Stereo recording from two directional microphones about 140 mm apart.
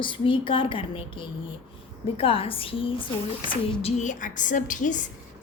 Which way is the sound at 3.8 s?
60° left (ahead or behind).